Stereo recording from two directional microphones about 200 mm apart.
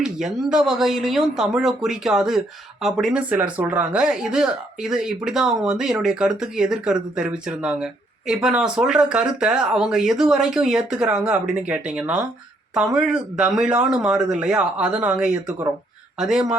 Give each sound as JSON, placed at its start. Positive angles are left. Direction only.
{"t": 0.0, "sound": "speech", "side_deg": -5}